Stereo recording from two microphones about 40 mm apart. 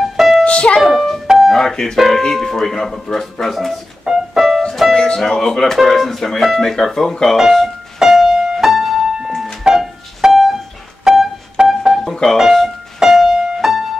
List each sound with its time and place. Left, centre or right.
0.0 s music: centre
0.5 s music: left
0.7 s music: centre
1.2 s music: centre
1.5 s a sound: centre
2.0 s speech: centre
4.0 s piano: centre
4.9 s speech: centre
7.3 s music: centre
11.1 s music: centre
11.6 s music: centre
12.0 s music: centre
12.6 s music: centre